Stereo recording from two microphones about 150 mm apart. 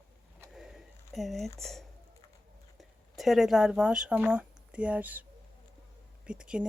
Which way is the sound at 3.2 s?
Centre (ahead or behind).